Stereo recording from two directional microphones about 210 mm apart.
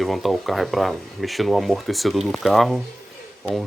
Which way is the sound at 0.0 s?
Centre (ahead or behind).